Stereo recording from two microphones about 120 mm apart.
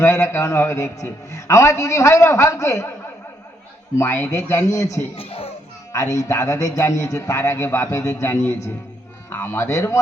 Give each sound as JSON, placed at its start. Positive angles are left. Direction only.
{"t": 0.0, "sound": "a man's voice", "side_deg": 20}
{"t": 3.9, "sound": "a man's voice", "side_deg": 20}
{"t": 5.1, "sound": "a child's voice", "side_deg": 55}
{"t": 5.9, "sound": "a man's voice", "side_deg": 25}